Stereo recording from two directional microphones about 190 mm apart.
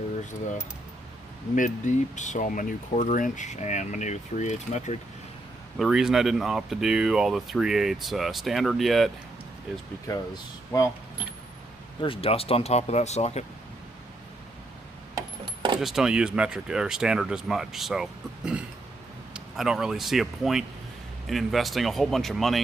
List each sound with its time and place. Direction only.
1.5 s speech: 40° left (ahead or behind)
5.7 s speech: centre (ahead or behind)
10.7 s speech: 15° left (ahead or behind)
11.9 s speech: 25° left (ahead or behind)
15.8 s speech: centre (ahead or behind)